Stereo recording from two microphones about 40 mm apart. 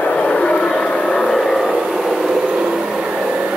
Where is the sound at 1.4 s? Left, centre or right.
Centre.